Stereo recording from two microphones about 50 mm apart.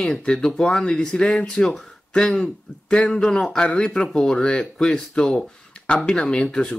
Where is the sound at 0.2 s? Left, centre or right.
Centre.